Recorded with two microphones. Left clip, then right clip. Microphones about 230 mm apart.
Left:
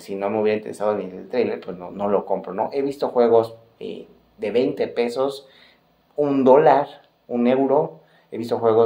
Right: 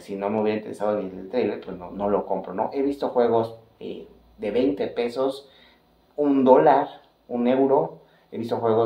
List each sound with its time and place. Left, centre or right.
0.0 s speech: left